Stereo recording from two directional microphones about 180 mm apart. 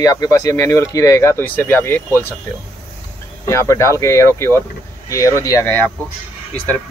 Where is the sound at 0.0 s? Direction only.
20° left (ahead or behind).